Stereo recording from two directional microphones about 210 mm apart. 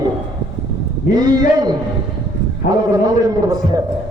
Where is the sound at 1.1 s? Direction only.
20° right (ahead or behind).